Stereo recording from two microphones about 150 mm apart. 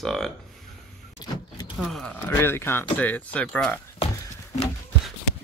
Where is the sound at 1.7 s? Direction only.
Centre (ahead or behind).